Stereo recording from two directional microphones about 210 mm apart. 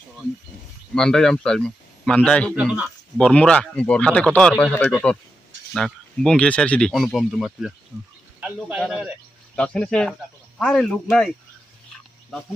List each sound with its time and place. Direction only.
0.9 s speech: centre (ahead or behind)
2.5 s speech: 5° right (ahead or behind)